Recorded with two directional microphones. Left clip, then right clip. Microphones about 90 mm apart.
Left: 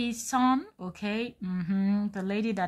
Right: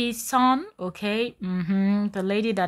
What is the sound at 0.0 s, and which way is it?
Speech, 35° right (ahead or behind).